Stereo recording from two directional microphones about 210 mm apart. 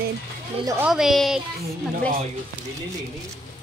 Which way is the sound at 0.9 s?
Centre (ahead or behind).